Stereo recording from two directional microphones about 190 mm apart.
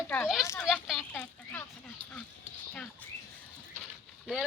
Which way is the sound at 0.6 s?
Centre (ahead or behind).